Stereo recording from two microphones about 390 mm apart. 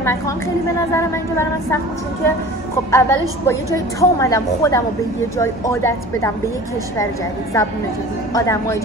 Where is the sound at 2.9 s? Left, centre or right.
Centre.